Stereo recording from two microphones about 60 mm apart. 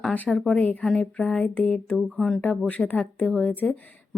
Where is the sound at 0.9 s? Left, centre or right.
Centre.